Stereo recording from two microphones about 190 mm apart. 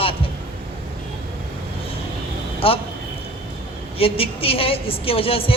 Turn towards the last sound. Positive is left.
turn(degrees=30)  # may be behind; listen again after turning